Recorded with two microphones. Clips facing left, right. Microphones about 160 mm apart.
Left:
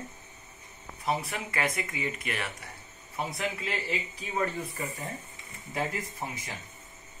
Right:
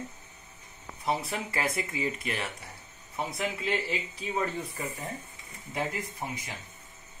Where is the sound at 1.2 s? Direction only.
30° right (ahead or behind).